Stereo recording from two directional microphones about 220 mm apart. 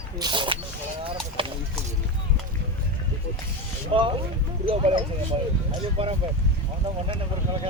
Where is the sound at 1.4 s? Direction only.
25° right (ahead or behind).